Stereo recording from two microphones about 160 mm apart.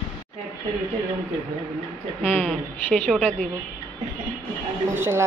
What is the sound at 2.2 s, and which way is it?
A woman's voice, 5° right (ahead or behind).